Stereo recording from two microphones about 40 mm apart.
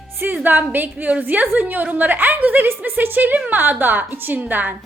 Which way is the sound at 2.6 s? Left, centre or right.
Right.